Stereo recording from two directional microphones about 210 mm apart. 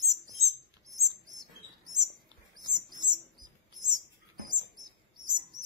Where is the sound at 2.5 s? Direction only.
20° right (ahead or behind).